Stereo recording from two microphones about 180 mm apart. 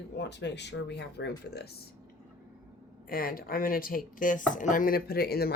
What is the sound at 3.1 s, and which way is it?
Speech, 55° left (ahead or behind).